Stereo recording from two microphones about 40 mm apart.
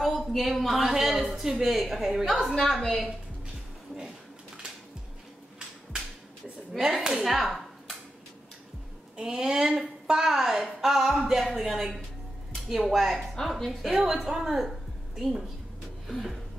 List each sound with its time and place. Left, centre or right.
0.0 s a woman's voice: centre
6.8 s a woman's voice: centre
7.2 s a sound: centre
9.1 s a woman's voice: centre